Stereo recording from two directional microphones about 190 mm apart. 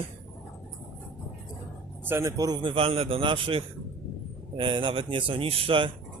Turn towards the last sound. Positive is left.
turn(degrees=-25)  # may be behind; listen again after turning